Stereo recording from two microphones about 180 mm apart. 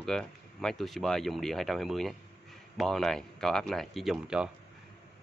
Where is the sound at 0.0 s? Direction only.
5° left (ahead or behind).